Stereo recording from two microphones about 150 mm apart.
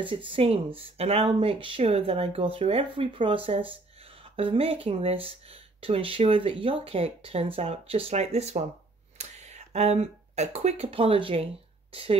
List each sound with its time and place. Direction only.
0.0 s speech: 35° right (ahead or behind)